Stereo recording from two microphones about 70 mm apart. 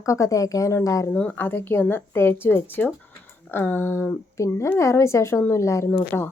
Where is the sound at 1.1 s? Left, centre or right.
Centre.